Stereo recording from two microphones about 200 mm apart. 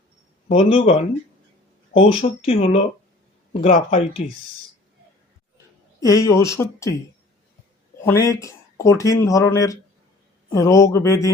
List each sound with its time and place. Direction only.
0.4 s a man's voice: 30° left (ahead or behind)
2.0 s speech: 25° left (ahead or behind)
3.6 s a man's voice: 40° left (ahead or behind)
6.0 s speech: 15° left (ahead or behind)
8.0 s speech: 15° left (ahead or behind)